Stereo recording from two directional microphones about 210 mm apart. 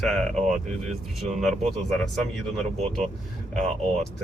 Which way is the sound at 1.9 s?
Centre (ahead or behind).